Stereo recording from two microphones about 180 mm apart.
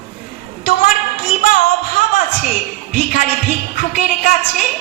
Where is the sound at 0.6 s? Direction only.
50° left (ahead or behind).